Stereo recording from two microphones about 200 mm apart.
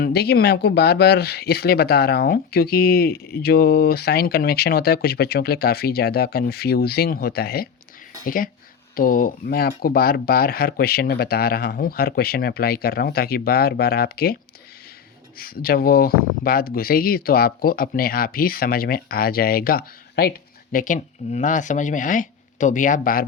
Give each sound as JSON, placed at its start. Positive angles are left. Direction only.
{"t": 0.0, "sound": "speech", "side_deg": 55}
{"t": 15.4, "sound": "speech", "side_deg": 50}